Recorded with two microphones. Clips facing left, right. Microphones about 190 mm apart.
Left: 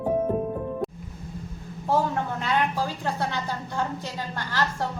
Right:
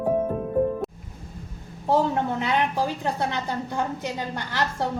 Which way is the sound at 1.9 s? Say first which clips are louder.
Right 3 dB; 20° right (ahead or behind).